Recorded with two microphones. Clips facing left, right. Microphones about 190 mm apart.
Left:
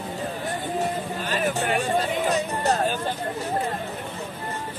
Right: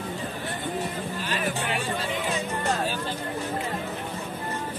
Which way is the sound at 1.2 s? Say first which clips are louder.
Left 5 dB; 45° left (ahead or behind).